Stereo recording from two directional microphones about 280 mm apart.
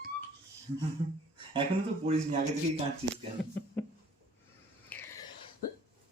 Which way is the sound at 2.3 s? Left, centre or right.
Centre.